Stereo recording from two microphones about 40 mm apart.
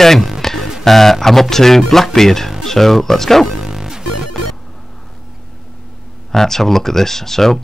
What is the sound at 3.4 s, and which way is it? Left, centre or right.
Music, centre.